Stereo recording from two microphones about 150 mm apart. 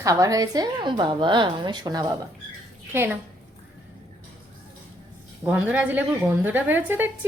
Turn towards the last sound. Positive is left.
turn(degrees=-15)  # may be behind; listen again after turning